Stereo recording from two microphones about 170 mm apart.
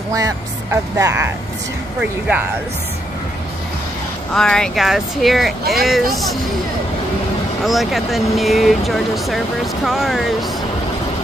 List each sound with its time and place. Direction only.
0.1 s speech: 20° right (ahead or behind)
4.3 s speech: 5° left (ahead or behind)
7.6 s speech: centre (ahead or behind)